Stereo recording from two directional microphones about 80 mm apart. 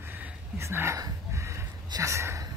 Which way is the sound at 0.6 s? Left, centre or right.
Right.